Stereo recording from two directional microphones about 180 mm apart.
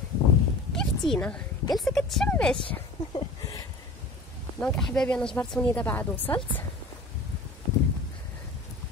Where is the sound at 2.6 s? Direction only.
25° left (ahead or behind).